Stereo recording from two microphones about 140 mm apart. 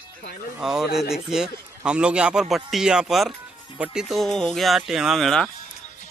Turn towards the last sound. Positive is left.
turn(degrees=0)  # may be behind; listen again after turning